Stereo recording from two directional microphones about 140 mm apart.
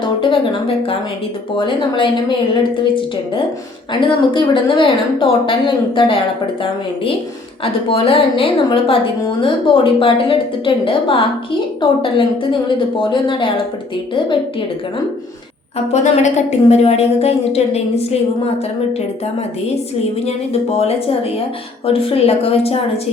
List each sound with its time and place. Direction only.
0.0 s a sound: 35° left (ahead or behind)
1.5 s a woman's voice: 35° left (ahead or behind)
4.0 s a woman's voice: 35° left (ahead or behind)
7.6 s a woman's voice: 40° left (ahead or behind)
15.9 s a woman's voice: 50° left (ahead or behind)
20.2 s a woman's voice: 50° left (ahead or behind)